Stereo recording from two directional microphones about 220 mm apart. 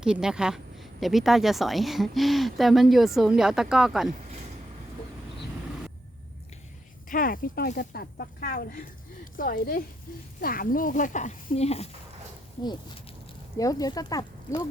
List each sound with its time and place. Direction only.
0.0 s speech: 5° right (ahead or behind)
7.1 s speech: 40° left (ahead or behind)
13.6 s speech: 15° left (ahead or behind)